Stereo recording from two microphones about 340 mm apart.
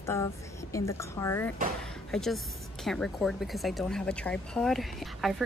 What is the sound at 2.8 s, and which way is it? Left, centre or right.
Speech, centre.